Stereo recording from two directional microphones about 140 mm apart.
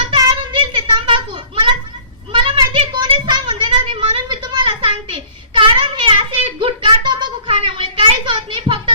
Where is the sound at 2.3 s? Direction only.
35° right (ahead or behind).